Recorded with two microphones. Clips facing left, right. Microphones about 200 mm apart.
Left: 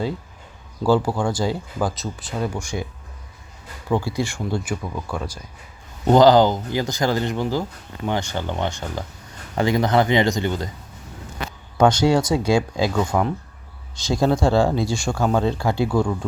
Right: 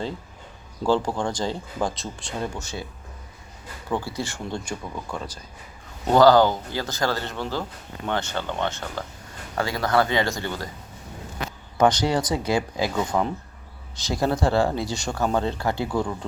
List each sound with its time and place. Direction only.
0.9 s speech: 10° left (ahead or behind)
3.9 s speech: 15° left (ahead or behind)
11.8 s speech: 10° left (ahead or behind)
13.0 s speech: centre (ahead or behind)
14.0 s speech: 15° left (ahead or behind)